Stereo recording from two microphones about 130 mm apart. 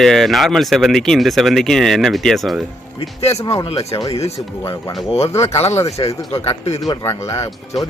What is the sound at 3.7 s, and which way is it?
Speech, 50° left (ahead or behind).